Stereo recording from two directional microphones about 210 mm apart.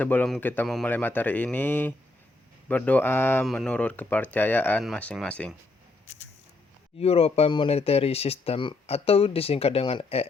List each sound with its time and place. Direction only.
0.0 s speech: 5° left (ahead or behind)
7.0 s speech: 30° left (ahead or behind)